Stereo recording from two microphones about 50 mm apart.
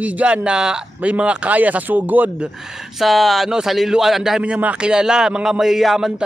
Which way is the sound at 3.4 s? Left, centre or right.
Centre.